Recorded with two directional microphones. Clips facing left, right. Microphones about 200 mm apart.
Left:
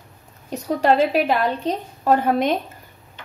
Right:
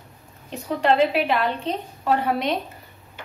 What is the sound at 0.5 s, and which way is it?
A woman's voice, 40° left (ahead or behind).